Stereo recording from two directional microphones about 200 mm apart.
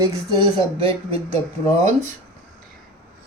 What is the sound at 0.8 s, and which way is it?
Speech, 25° right (ahead or behind).